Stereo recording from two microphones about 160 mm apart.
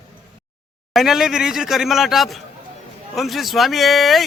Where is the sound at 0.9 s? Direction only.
Centre (ahead or behind).